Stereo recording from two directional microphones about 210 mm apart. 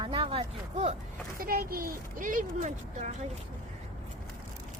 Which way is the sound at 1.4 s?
45° right (ahead or behind).